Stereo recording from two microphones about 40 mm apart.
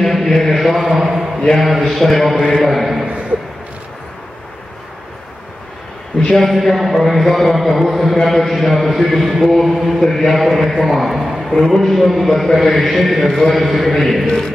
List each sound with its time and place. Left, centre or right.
0.0 s mantra: centre
0.9 s a sound: centre
1.6 s a man's voice: centre
3.1 s a sound: right
6.1 s a man's voice: centre
9.9 s a man's voice: centre